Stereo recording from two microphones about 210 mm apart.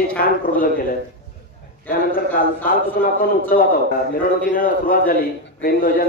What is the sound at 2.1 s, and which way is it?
A man's voice, 45° left (ahead or behind).